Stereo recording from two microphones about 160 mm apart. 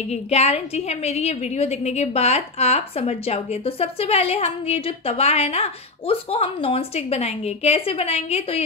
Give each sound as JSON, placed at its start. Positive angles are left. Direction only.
{"t": 0.1, "sound": "a woman's voice", "side_deg": 40}